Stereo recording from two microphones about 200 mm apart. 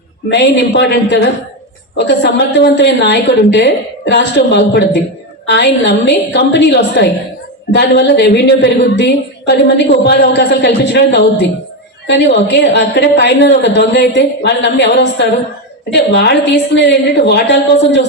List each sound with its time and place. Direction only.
0.3 s a woman's voice: 60° left (ahead or behind)